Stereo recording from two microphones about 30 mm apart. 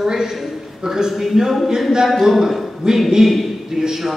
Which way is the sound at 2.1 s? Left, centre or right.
Centre.